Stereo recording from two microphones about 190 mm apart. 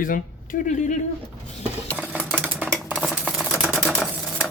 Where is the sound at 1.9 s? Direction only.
5° right (ahead or behind).